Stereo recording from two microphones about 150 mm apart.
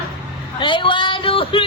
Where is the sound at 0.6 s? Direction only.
35° left (ahead or behind).